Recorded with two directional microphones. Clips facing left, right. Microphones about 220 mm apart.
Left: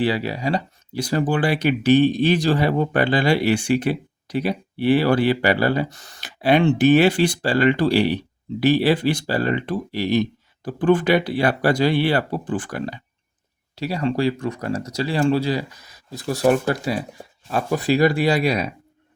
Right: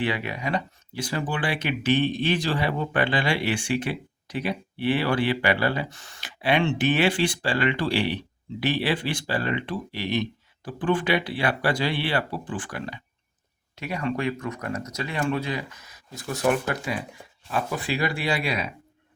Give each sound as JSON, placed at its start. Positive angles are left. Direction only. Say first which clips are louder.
{"t": 0.0, "sound": "speech", "louder": "left 6 dB", "side_deg": 35}